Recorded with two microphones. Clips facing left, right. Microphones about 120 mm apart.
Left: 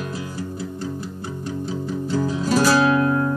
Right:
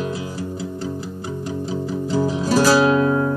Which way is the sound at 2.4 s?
5° right (ahead or behind).